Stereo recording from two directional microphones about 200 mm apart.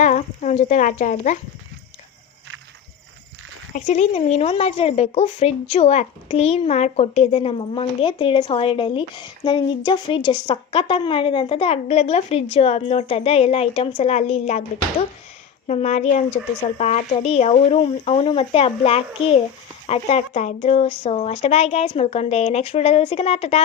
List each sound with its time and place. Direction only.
0.0 s speech: 35° left (ahead or behind)
3.8 s speech: 35° left (ahead or behind)
15.6 s speech: 35° left (ahead or behind)